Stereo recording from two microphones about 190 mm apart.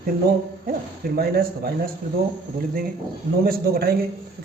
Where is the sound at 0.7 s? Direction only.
50° right (ahead or behind).